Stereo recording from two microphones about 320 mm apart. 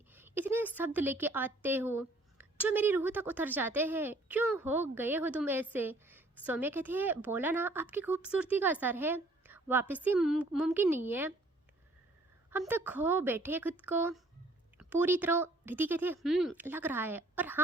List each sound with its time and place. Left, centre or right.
0.1 s a woman's voice: centre
12.5 s a woman's voice: centre